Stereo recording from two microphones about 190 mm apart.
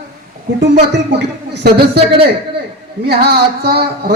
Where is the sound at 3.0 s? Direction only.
60° right (ahead or behind).